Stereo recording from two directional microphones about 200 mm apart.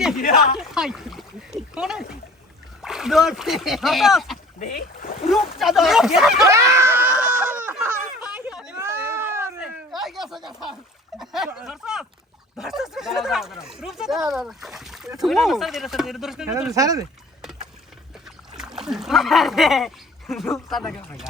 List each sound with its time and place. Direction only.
0.2 s speech: 45° left (ahead or behind)
0.6 s a sound: 5° right (ahead or behind)
2.8 s speech: centre (ahead or behind)
4.6 s speech: 45° left (ahead or behind)
5.3 s speech: centre (ahead or behind)
6.4 s screaming: 15° right (ahead or behind)
8.2 s a sound: 5° right (ahead or behind)
8.9 s cat: 10° right (ahead or behind)
10.0 s a sound: centre (ahead or behind)
11.2 s speech: centre (ahead or behind)
16.7 s speech: 15° right (ahead or behind)
18.5 s speech: centre (ahead or behind)